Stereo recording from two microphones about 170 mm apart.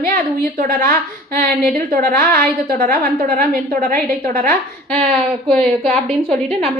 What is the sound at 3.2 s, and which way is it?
A woman's voice, 55° right (ahead or behind).